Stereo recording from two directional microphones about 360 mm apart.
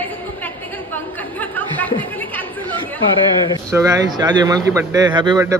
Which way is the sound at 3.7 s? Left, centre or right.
Centre.